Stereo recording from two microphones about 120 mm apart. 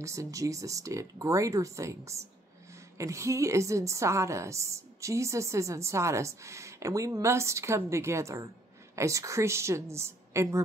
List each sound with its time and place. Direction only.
0.0 s a woman's voice: 25° right (ahead or behind)